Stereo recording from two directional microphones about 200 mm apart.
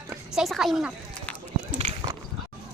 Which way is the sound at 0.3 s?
Centre (ahead or behind).